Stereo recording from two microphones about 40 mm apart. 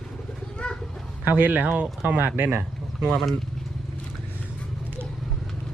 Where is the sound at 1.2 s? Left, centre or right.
Right.